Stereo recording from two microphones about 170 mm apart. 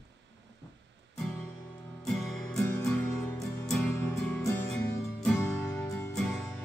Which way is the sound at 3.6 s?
Centre (ahead or behind).